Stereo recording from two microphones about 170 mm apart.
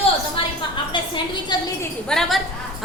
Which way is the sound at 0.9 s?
30° left (ahead or behind).